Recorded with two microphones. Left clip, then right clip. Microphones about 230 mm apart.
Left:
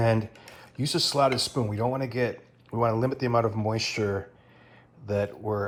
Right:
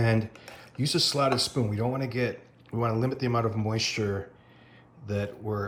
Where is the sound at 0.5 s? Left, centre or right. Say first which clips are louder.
Even; centre.